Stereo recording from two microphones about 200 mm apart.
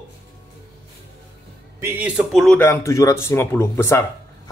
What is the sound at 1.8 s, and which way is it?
Speech, 5° right (ahead or behind).